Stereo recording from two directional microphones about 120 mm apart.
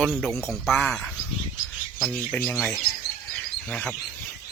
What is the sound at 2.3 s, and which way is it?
Speech, 10° left (ahead or behind).